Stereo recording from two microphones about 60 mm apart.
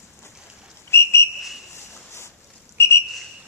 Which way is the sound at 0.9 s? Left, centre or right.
Left.